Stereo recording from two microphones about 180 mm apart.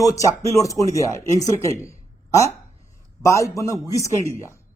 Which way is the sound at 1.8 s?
15° left (ahead or behind).